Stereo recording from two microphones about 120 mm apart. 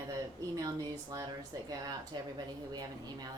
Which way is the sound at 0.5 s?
30° right (ahead or behind).